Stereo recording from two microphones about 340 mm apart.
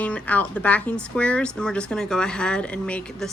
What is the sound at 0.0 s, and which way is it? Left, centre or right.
Speech, centre.